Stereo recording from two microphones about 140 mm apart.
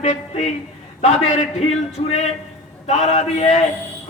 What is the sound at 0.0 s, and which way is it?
A man's voice, 55° left (ahead or behind).